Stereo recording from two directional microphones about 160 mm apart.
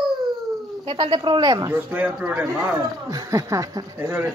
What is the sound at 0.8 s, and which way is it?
Speech, 30° right (ahead or behind).